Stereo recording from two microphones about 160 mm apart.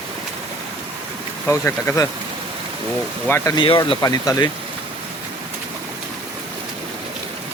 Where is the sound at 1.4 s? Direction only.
15° left (ahead or behind).